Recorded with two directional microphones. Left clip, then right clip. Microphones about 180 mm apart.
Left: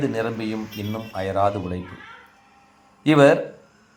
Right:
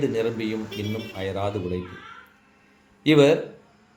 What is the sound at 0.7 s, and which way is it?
Speech, 60° right (ahead or behind).